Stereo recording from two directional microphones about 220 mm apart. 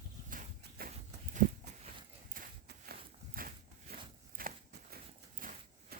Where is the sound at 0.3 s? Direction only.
40° right (ahead or behind).